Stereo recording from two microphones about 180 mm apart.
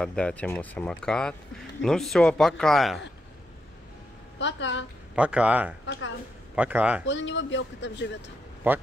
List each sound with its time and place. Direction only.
0.0 s speech: 5° left (ahead or behind)
4.4 s a man's voice: 85° left
5.1 s speech: 5° right (ahead or behind)
5.9 s a woman's voice: 90° left
6.5 s speech: 5° right (ahead or behind)
7.1 s a man's voice: 85° left
8.6 s speech: 10° right (ahead or behind)